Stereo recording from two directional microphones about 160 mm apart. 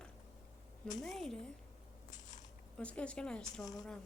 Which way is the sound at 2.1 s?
50° left (ahead or behind).